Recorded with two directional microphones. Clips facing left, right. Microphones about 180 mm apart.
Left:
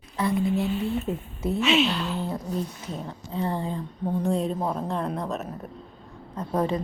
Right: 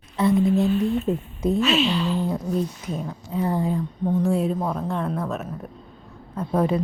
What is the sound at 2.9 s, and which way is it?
A woman's voice, 10° right (ahead or behind).